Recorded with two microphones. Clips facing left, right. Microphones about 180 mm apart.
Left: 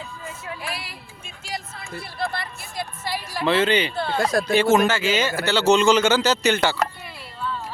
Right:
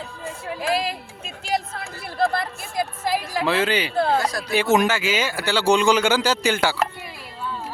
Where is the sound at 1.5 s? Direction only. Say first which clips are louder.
Right 8 dB; 75° right (ahead or behind); by 2.8 s 50° right (ahead or behind).